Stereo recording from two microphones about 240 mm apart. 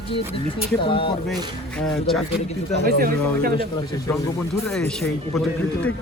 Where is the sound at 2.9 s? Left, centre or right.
Right.